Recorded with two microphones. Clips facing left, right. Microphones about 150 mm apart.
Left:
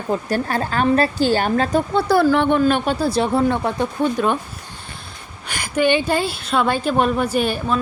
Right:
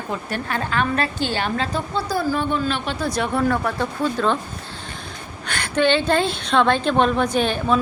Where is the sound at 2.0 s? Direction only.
75° left (ahead or behind); by 3.0 s 45° left (ahead or behind).